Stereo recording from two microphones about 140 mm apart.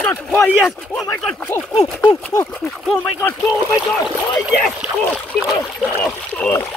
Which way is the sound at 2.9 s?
15° left (ahead or behind).